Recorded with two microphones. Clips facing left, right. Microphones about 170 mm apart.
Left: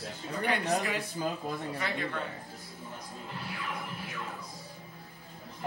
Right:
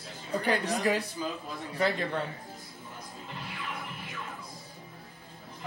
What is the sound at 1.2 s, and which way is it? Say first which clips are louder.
Speech: left 2 dB; 45° left (ahead or behind).